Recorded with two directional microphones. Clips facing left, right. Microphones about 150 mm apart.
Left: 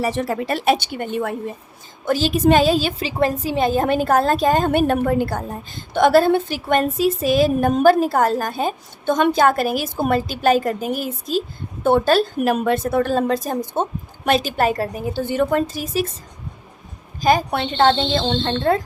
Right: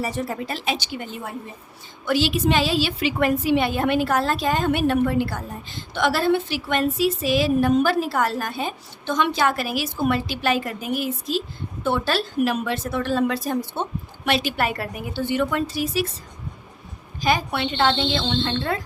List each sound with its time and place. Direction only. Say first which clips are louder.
0.0 s a woman's voice: left 5 dB; 85° left; by 1.4 s 65° left (ahead or behind)
2.0 s speech: left 4 dB; 40° left (ahead or behind)
3.1 s a woman's voice: right 2 dB; 35° left (ahead or behind)
17.2 s speech: left 5 dB; 45° left (ahead or behind)